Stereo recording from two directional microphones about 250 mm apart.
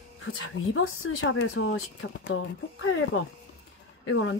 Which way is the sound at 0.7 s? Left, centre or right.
Left.